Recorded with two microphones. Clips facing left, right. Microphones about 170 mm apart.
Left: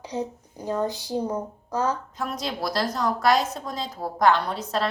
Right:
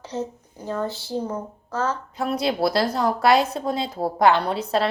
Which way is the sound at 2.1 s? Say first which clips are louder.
Right 7 dB; 30° right (ahead or behind).